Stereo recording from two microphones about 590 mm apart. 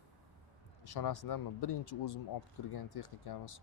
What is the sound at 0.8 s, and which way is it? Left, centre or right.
Speech, left.